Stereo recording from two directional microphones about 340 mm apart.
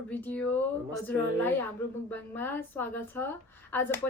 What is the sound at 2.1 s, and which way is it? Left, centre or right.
A woman's voice, centre.